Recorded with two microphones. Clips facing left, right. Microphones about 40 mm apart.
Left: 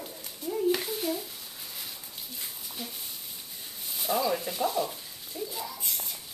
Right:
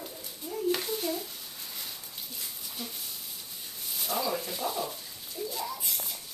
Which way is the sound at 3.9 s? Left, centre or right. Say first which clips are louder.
Left 3 dB; centre.